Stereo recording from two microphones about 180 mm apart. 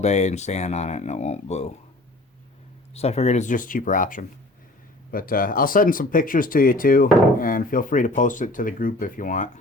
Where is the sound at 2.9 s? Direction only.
35° left (ahead or behind).